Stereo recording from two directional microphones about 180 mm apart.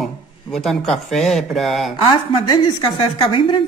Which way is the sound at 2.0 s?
25° left (ahead or behind).